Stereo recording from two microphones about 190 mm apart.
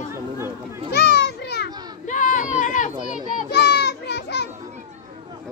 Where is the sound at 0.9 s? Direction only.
60° left (ahead or behind).